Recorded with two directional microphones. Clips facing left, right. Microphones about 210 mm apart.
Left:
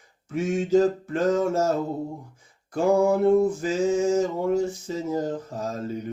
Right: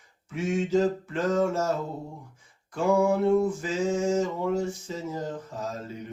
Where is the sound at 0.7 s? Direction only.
45° left (ahead or behind).